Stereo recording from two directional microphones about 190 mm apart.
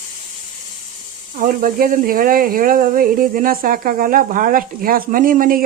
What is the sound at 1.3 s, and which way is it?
Speech, 45° right (ahead or behind).